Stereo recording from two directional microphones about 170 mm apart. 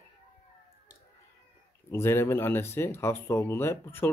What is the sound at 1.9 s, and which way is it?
Speech, 15° left (ahead or behind).